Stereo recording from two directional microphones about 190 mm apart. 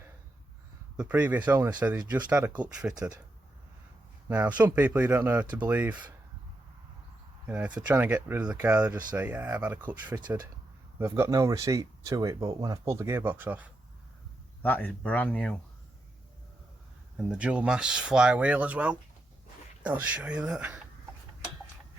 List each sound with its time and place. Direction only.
0.9 s speech: 5° right (ahead or behind)
1.5 s speech: 20° right (ahead or behind)
2.6 s speech: 5° right (ahead or behind)
4.3 s speech: 10° right (ahead or behind)
7.4 s speech: 10° right (ahead or behind)
10.2 s speech: 25° right (ahead or behind)
14.6 s speech: 10° left (ahead or behind)
17.2 s speech: 5° right (ahead or behind)